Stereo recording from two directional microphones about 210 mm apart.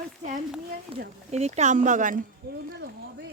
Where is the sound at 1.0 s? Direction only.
35° right (ahead or behind).